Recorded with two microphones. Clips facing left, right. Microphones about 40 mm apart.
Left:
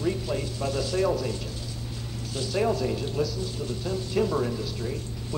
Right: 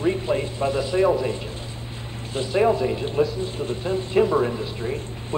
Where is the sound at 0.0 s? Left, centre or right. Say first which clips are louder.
Right 6 dB; right.